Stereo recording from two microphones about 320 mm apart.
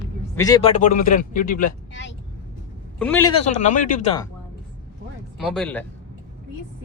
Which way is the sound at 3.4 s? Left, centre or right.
Left.